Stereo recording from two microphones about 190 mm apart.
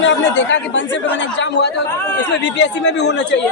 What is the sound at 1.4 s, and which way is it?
Speech, 65° left (ahead or behind).